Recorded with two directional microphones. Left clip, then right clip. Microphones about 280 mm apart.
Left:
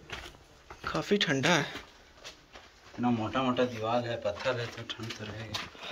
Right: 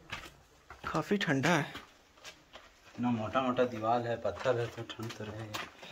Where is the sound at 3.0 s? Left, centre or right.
Centre; by 5.3 s right.